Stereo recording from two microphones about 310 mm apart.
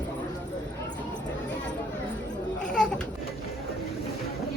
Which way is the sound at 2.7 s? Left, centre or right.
Centre.